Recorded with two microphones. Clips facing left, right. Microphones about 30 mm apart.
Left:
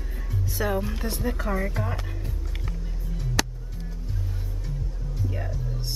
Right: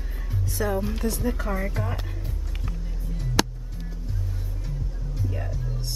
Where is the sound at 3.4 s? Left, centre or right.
Centre.